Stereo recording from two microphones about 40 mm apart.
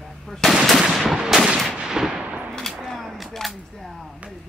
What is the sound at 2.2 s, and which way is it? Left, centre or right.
Gunshot, right.